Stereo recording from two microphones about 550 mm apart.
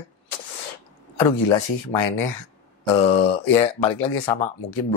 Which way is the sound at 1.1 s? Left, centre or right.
Left.